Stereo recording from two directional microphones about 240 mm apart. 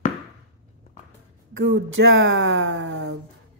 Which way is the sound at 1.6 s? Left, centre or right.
Right.